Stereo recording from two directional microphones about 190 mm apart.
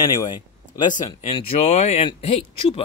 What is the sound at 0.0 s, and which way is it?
Speech, 25° left (ahead or behind).